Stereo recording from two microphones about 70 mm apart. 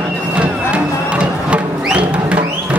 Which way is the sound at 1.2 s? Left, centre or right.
Centre.